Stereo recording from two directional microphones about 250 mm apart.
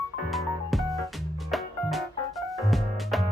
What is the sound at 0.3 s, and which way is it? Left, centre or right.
Music, centre.